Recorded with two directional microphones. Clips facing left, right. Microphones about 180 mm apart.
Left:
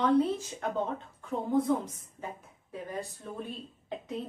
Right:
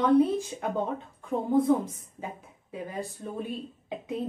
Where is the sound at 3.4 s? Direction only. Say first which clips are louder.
Right 5 dB; 10° right (ahead or behind).